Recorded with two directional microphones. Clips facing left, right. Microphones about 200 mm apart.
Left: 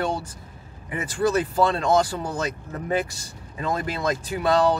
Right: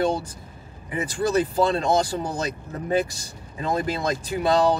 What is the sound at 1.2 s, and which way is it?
Speech, 35° right (ahead or behind).